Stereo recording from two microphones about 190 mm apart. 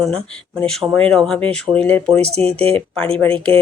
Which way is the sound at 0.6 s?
5° left (ahead or behind).